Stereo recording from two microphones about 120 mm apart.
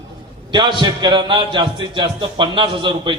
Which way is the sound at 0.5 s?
40° right (ahead or behind).